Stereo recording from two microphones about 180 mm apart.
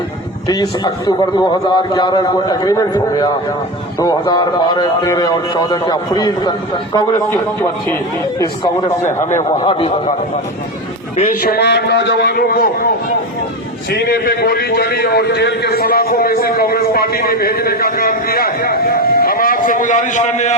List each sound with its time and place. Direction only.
0.4 s a man's voice: 20° left (ahead or behind)
9.3 s a man's voice: 30° left (ahead or behind)
11.4 s a man's voice: 65° left (ahead or behind)
13.9 s a man's voice: 60° left (ahead or behind); by 20.6 s 40° left (ahead or behind)